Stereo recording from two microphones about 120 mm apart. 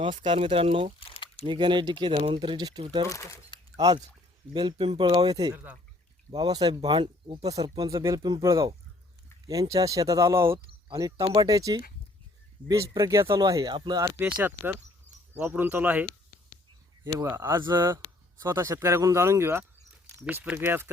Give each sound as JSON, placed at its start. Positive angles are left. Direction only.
{"t": 0.2, "sound": "speech", "side_deg": -45}
{"t": 0.9, "sound": "a sound", "side_deg": 55}
{"t": 1.5, "sound": "speech", "side_deg": -40}
{"t": 3.1, "sound": "speech", "side_deg": 25}
{"t": 3.8, "sound": "speech", "side_deg": -35}
{"t": 7.5, "sound": "speech", "side_deg": -30}
{"t": 10.8, "sound": "speech", "side_deg": -40}
{"t": 14.2, "sound": "speech", "side_deg": -10}
{"t": 17.5, "sound": "speech", "side_deg": -35}
{"t": 17.8, "sound": "speech", "side_deg": -20}